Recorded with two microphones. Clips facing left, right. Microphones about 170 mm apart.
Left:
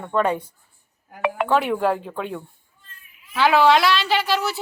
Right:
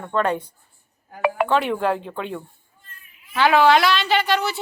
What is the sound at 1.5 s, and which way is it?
A woman's voice, 5° left (ahead or behind).